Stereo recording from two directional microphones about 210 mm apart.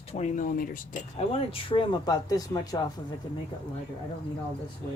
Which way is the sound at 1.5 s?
25° left (ahead or behind).